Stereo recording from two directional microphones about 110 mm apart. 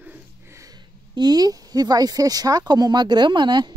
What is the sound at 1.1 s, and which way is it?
Speech, 40° right (ahead or behind).